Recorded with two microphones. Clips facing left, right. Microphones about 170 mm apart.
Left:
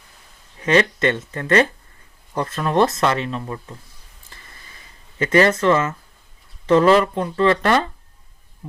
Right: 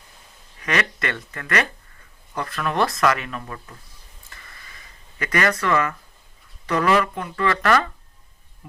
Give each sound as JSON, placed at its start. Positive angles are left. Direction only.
{"t": 0.6, "sound": "speech", "side_deg": 25}
{"t": 5.2, "sound": "speech", "side_deg": 25}